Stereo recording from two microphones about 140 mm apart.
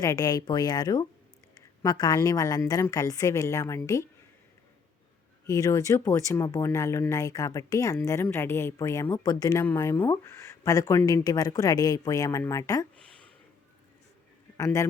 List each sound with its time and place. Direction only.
0.0 s a woman's voice: 25° left (ahead or behind)
5.5 s a woman's voice: 25° left (ahead or behind)
14.6 s a woman's voice: 25° left (ahead or behind)